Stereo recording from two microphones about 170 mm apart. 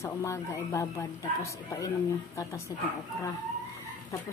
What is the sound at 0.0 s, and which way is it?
Speech, 15° left (ahead or behind).